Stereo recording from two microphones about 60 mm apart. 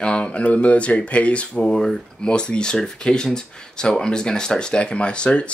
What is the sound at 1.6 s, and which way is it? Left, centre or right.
Speech, centre.